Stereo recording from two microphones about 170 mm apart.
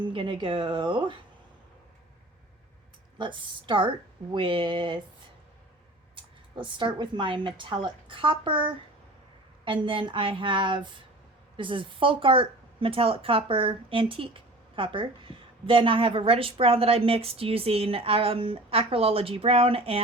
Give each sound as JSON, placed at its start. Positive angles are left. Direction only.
{"t": 0.0, "sound": "speech", "side_deg": -30}
{"t": 3.2, "sound": "speech", "side_deg": -30}
{"t": 6.1, "sound": "speech", "side_deg": -30}